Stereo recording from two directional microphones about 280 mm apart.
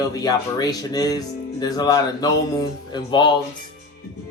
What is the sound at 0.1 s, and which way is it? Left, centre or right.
Speech, centre.